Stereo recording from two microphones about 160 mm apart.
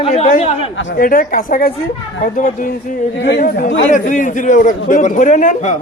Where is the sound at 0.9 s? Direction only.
60° left (ahead or behind).